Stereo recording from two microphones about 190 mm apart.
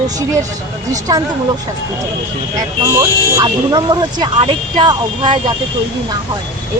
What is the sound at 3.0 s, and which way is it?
Speech, 20° right (ahead or behind).